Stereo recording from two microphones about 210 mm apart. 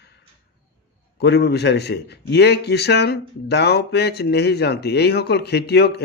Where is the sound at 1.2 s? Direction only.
50° left (ahead or behind).